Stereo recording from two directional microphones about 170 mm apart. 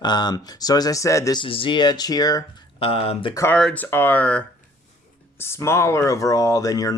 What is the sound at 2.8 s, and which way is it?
Speech, 35° left (ahead or behind).